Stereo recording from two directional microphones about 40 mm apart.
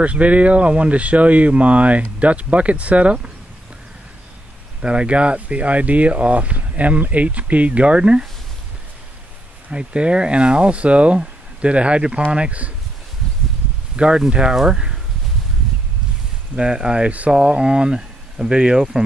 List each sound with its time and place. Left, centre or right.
0.0 s speech: right
4.8 s speech: right
9.7 s speech: right
13.9 s speech: right
16.5 s speech: right